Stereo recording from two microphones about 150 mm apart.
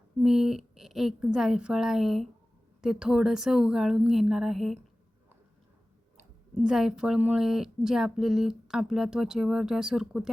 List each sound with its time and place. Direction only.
0.2 s speech: 5° right (ahead or behind)
6.6 s speech: 5° right (ahead or behind)